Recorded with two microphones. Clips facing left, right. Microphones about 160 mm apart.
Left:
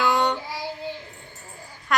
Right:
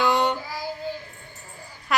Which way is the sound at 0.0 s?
Centre (ahead or behind).